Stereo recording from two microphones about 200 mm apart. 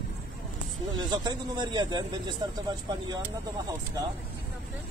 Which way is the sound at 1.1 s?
20° right (ahead or behind).